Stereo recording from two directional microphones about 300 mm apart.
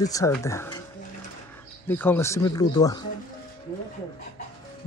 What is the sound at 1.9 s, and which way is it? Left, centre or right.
Speech, centre.